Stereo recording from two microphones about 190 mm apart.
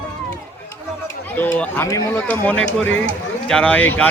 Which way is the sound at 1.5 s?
5° left (ahead or behind).